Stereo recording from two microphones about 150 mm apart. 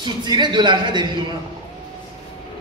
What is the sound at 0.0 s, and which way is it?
A man's voice, 30° right (ahead or behind).